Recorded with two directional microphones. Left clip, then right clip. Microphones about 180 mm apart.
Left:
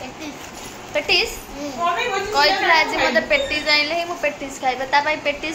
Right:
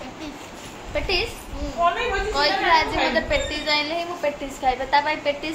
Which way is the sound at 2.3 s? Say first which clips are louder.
Left 4 dB; 10° right (ahead or behind).